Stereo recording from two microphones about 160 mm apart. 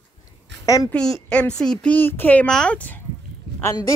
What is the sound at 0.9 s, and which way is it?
A man's voice, 5° left (ahead or behind).